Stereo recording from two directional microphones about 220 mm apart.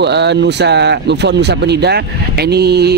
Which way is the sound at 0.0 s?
50° right (ahead or behind).